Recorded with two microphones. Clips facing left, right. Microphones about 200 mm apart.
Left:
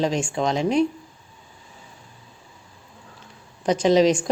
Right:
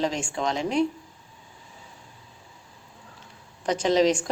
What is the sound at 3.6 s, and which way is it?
Speech, 15° left (ahead or behind).